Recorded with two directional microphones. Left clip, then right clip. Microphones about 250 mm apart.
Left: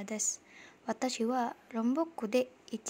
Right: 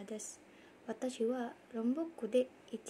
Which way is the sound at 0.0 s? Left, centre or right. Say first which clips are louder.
Left 9 dB; left.